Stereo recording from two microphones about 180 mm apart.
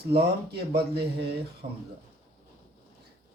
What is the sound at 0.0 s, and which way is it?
Speech, 60° right (ahead or behind).